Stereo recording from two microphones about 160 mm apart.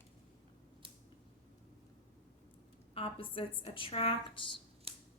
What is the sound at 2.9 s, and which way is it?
A woman's voice, 35° left (ahead or behind).